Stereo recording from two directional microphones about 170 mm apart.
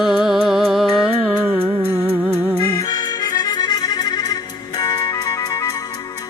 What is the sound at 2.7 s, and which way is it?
Music, 25° left (ahead or behind).